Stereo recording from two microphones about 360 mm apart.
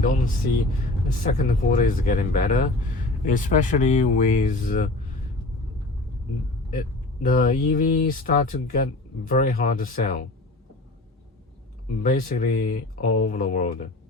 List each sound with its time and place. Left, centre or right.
1.0 s speech: left
6.7 s speech: left
12.0 s speech: left